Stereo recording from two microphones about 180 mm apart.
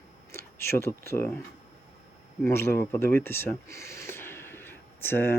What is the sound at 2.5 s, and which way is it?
Speech, 15° left (ahead or behind).